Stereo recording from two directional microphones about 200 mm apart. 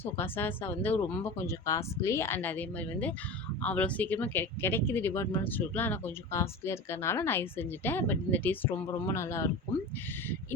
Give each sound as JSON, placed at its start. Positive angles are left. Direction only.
{"t": 0.0, "sound": "speech", "side_deg": 10}